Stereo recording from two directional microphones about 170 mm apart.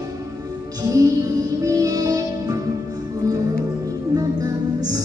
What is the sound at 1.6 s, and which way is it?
Music, 20° right (ahead or behind).